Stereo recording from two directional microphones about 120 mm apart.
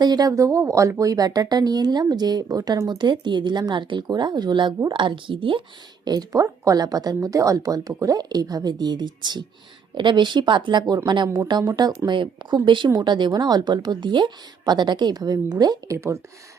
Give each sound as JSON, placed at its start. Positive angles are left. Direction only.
{"t": 0.0, "sound": "speech", "side_deg": -35}
{"t": 6.1, "sound": "speech", "side_deg": -30}
{"t": 12.0, "sound": "speech", "side_deg": -40}
{"t": 16.0, "sound": "speech", "side_deg": -25}